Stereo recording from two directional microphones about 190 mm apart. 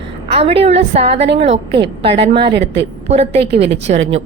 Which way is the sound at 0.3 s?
30° right (ahead or behind).